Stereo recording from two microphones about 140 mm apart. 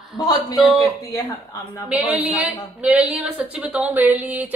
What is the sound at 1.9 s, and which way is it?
A woman's voice, centre (ahead or behind).